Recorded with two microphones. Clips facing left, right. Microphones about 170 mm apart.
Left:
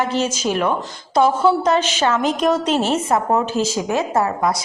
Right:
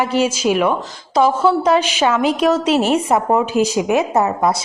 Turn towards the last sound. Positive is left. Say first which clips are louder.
# right 3 dB
turn(degrees=-20)  # may be behind; listen again after turning